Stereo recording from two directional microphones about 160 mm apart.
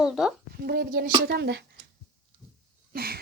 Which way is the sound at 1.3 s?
90° right.